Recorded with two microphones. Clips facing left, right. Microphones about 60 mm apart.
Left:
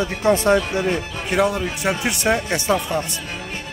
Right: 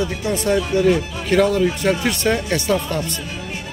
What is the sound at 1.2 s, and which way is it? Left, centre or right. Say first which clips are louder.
Speech: right 4 dB; centre.